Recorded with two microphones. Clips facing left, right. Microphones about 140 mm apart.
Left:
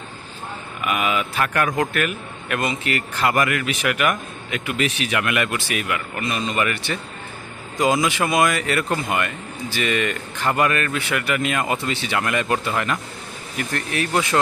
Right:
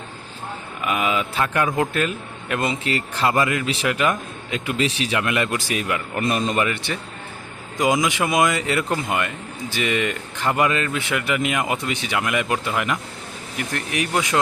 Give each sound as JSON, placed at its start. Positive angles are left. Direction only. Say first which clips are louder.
{"t": 0.8, "sound": "a man's voice", "louder": "even", "side_deg": -25}
{"t": 6.2, "sound": "a man's voice", "louder": "right 4 dB", "side_deg": -45}
{"t": 6.6, "sound": "a man's voice", "louder": "even", "side_deg": -20}